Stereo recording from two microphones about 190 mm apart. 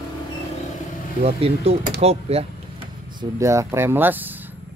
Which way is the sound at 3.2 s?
15° right (ahead or behind).